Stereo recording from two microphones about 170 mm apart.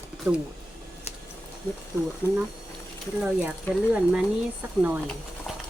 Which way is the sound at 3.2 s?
10° right (ahead or behind).